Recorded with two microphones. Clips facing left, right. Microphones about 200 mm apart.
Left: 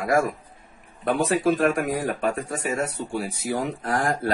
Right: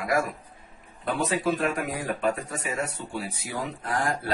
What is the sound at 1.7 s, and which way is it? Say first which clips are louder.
Speech: left 6 dB; 80° left.